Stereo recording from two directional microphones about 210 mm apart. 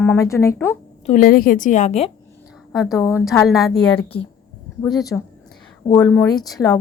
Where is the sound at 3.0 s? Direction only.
15° left (ahead or behind).